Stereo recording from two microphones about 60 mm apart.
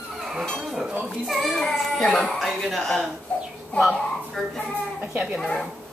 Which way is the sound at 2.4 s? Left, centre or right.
Centre.